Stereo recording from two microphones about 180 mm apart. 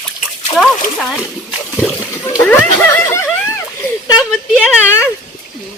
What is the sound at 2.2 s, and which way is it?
Speech, 15° left (ahead or behind).